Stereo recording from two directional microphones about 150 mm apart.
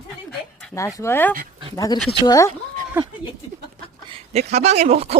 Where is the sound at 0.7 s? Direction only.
20° left (ahead or behind).